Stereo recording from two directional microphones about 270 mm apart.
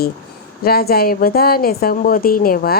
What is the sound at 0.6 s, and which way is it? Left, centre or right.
A woman's voice, left.